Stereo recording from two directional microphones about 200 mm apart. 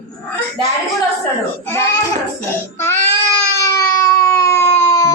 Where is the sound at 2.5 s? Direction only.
10° left (ahead or behind).